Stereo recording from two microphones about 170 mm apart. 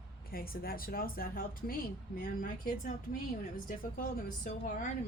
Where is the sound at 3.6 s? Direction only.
55° left (ahead or behind).